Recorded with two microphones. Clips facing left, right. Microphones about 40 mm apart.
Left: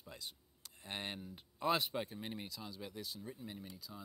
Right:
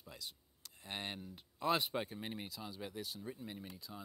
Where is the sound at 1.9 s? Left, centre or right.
Centre.